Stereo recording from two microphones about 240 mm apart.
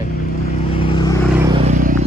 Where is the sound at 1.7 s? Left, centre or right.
Right.